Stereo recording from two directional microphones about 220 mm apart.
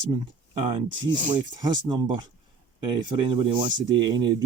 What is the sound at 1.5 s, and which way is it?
Speech, 20° right (ahead or behind).